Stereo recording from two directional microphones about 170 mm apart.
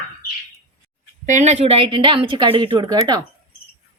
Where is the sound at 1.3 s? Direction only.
45° right (ahead or behind); by 3.2 s 25° right (ahead or behind).